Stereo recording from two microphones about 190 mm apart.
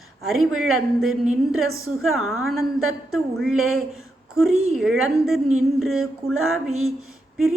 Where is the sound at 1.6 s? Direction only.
90° right.